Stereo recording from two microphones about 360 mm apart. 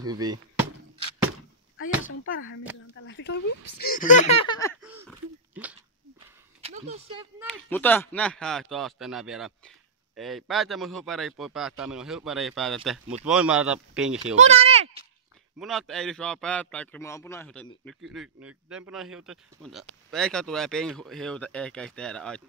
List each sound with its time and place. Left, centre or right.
0.0 s speech: centre
1.8 s speech: left; by 4.7 s centre
4.8 s a sound: centre
6.1 s a sound: centre
7.4 s speech: centre
14.2 s speech: centre
15.6 s speech: centre